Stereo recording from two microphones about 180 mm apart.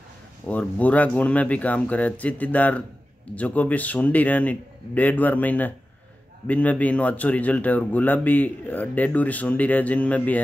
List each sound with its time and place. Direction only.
0.5 s speech: 10° left (ahead or behind)